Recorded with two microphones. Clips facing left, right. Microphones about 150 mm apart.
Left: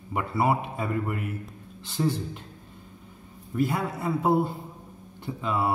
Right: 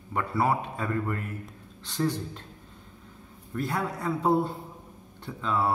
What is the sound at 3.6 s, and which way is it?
A man's voice, 5° left (ahead or behind).